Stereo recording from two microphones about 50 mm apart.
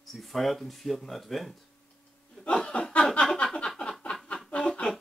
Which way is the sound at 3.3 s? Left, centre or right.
Centre.